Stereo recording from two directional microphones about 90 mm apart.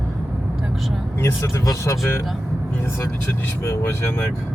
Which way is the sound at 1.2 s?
35° left (ahead or behind).